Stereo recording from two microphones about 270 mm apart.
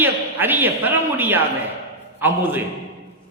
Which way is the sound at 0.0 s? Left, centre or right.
Centre.